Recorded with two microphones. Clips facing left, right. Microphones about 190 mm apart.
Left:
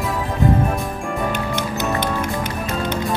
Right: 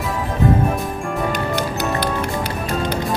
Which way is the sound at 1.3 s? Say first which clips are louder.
Right 2 dB; 35° right (ahead or behind).